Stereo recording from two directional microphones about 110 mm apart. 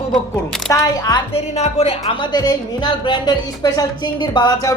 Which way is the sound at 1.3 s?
75° left (ahead or behind).